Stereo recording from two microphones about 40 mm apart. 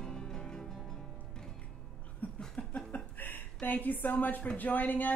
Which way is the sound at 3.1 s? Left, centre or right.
Left.